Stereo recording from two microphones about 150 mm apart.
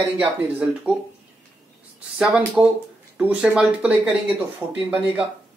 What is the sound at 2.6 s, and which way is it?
Speech, 10° right (ahead or behind).